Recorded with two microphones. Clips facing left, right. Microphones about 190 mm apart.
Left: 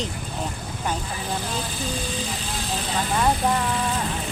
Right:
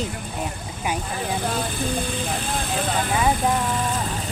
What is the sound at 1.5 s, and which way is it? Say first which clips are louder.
Speech: right 4 dB; 55° right (ahead or behind).